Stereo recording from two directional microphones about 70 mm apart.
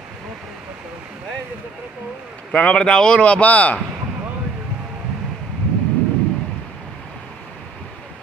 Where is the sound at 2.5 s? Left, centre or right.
Centre.